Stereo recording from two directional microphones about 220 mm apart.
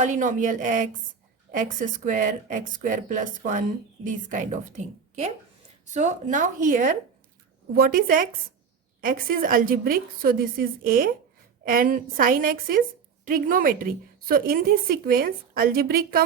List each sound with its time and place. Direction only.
0.0 s a woman's voice: 35° right (ahead or behind)